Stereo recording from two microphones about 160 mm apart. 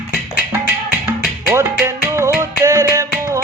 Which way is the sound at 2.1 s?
15° right (ahead or behind).